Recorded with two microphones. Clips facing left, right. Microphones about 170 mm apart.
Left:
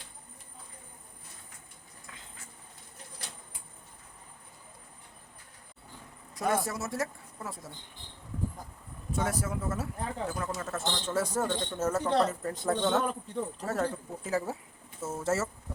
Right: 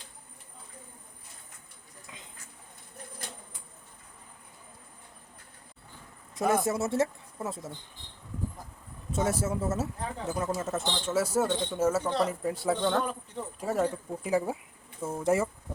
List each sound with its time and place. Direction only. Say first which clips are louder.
2.0 s a sound: right 2 dB; 20° right (ahead or behind)
6.5 s speech: right 4 dB; 25° right (ahead or behind)
9.1 s speech: right 3 dB; 25° right (ahead or behind)
11.0 s speech: right 4 dB; 10° right (ahead or behind)
13.6 s speech: right 6 dB; 10° right (ahead or behind)